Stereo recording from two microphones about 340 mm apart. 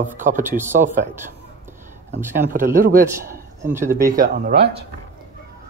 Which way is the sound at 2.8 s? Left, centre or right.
Right.